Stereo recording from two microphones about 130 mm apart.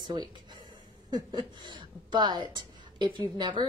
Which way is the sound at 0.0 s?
35° right (ahead or behind).